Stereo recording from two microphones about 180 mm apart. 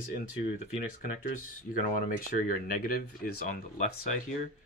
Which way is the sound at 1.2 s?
45° left (ahead or behind).